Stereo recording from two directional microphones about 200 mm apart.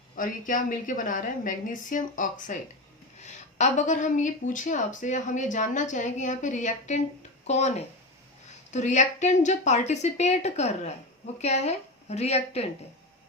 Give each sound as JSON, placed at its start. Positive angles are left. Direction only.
{"t": 0.2, "sound": "speech", "side_deg": 40}